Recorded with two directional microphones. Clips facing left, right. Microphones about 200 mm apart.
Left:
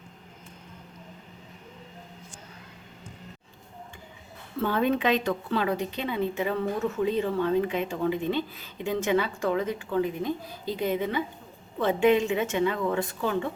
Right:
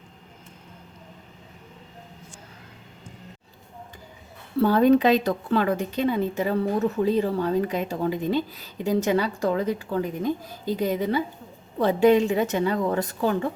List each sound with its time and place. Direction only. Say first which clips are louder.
4.6 s a woman's voice: right 7 dB; 40° right (ahead or behind)